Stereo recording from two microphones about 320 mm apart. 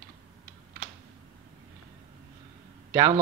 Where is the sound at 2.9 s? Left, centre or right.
Centre.